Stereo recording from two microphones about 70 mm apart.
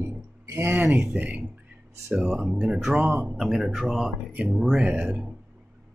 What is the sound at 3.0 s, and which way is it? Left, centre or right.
Speech, right.